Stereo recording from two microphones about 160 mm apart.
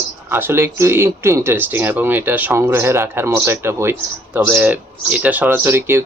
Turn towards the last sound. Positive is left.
turn(degrees=-15)  # may be behind; listen again after turning